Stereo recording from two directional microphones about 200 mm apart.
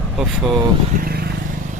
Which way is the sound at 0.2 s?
Centre (ahead or behind).